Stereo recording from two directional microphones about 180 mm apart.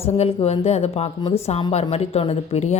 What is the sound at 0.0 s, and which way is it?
A woman's voice, 30° left (ahead or behind).